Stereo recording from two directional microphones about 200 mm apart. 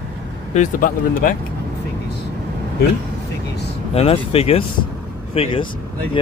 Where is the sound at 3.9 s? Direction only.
30° left (ahead or behind).